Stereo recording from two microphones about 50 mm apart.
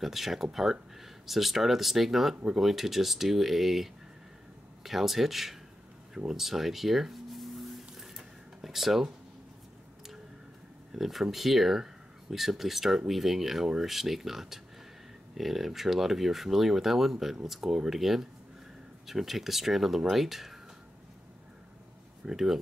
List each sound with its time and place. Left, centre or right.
0.0 s speech: centre
6.1 s a sound: centre
8.5 s speech: centre
10.9 s speech: centre
22.2 s speech: centre